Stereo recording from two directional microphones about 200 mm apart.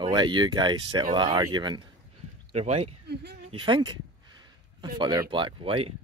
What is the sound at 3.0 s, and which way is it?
Speech, 55° right (ahead or behind).